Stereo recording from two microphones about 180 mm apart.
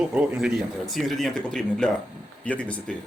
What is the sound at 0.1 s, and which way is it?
Speech, 5° right (ahead or behind).